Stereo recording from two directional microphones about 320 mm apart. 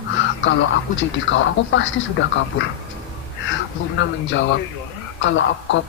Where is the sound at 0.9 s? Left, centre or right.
Left.